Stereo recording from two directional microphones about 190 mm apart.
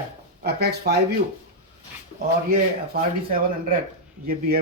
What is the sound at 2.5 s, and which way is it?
Speech, 50° right (ahead or behind).